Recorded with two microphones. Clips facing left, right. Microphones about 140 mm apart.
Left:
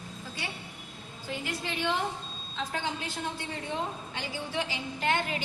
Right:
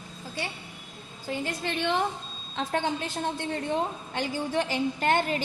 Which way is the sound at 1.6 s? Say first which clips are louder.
Right 3 dB; 60° right (ahead or behind).